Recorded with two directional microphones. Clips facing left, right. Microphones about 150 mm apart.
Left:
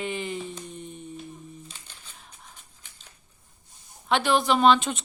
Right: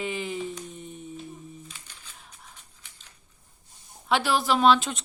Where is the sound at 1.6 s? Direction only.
25° left (ahead or behind).